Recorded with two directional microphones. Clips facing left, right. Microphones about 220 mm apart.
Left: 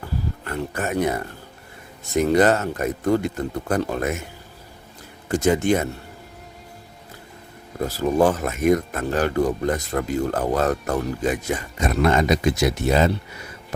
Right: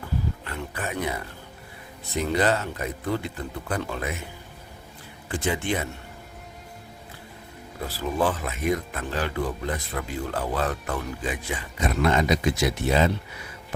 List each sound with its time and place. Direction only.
0.4 s speech: 45° left (ahead or behind)
5.3 s speech: 40° left (ahead or behind)
7.8 s speech: 45° left (ahead or behind)